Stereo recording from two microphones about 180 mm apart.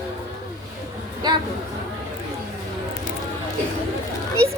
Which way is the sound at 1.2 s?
25° right (ahead or behind).